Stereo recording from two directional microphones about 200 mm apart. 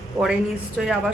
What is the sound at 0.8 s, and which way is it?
Speech, centre (ahead or behind).